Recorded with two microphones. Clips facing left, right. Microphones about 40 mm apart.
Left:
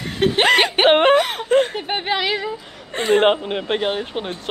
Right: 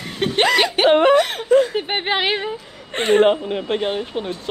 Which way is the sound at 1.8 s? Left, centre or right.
Right.